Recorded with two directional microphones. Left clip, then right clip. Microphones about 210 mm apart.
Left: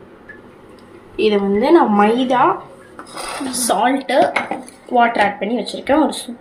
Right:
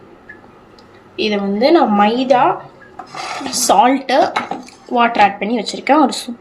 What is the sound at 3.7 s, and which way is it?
A woman's voice, 35° right (ahead or behind).